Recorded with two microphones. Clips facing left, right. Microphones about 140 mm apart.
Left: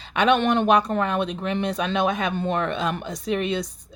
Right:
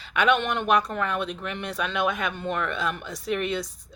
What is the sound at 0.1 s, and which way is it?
Speech, 25° left (ahead or behind).